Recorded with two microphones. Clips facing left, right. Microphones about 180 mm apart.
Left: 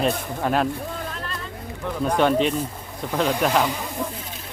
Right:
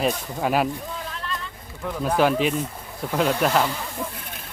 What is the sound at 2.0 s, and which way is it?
Speech, 5° right (ahead or behind).